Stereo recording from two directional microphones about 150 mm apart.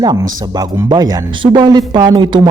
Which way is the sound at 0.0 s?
25° right (ahead or behind).